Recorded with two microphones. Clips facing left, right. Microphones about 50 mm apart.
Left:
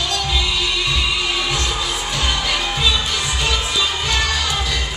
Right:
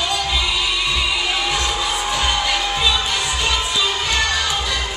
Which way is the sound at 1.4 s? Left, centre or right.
Centre.